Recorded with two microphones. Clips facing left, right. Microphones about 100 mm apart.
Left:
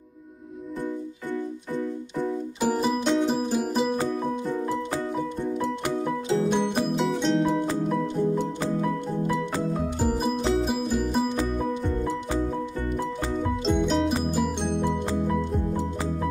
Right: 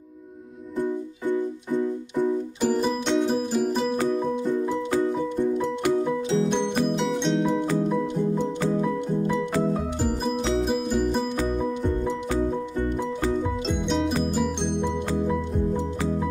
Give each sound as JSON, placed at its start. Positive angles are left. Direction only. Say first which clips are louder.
{"t": 2.6, "sound": "music", "louder": "left 1 dB", "side_deg": 5}
{"t": 6.0, "sound": "music", "louder": "right 1 dB", "side_deg": 5}
{"t": 9.4, "sound": "music", "louder": "right 3 dB", "side_deg": 0}
{"t": 13.7, "sound": "music", "louder": "left 4 dB", "side_deg": 0}